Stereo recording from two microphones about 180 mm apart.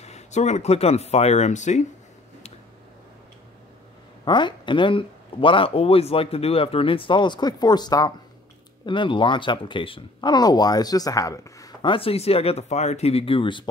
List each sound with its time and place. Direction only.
0.0 s speech: 40° left (ahead or behind)
4.2 s speech: 25° left (ahead or behind)